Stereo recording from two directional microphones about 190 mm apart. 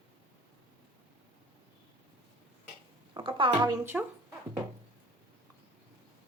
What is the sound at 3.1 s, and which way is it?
Speech, 25° right (ahead or behind).